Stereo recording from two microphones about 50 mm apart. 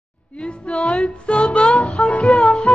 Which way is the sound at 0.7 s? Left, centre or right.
Centre.